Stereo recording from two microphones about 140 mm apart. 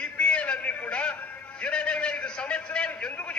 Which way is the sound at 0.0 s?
10° left (ahead or behind).